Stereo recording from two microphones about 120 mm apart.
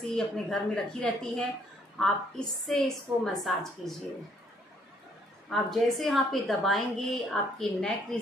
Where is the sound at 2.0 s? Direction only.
5° left (ahead or behind).